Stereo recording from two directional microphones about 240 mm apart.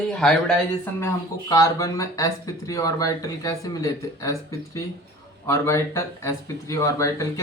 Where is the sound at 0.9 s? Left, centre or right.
Centre.